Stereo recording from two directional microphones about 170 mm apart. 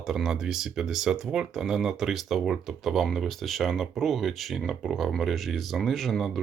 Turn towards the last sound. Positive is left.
turn(degrees=0)  # may be behind; listen again after turning